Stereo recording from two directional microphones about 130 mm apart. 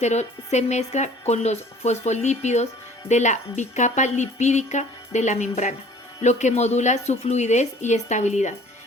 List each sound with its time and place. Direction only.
0.0 s a woman's voice: 60° left (ahead or behind)